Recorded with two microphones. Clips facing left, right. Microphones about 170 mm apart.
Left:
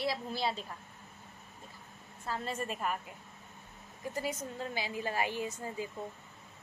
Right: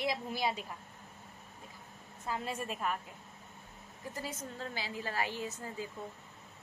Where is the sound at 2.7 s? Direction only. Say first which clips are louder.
Right 1 dB; centre (ahead or behind).